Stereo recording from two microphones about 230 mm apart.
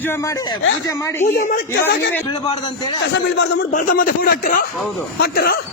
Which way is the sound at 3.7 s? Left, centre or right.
Left.